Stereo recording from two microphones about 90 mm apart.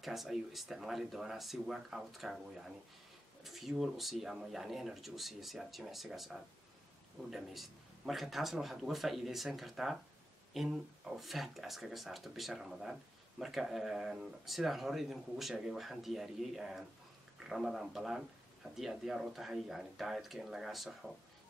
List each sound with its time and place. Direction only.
0.0 s speech: centre (ahead or behind)